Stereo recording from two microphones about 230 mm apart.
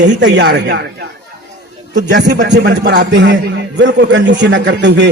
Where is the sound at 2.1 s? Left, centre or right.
Right.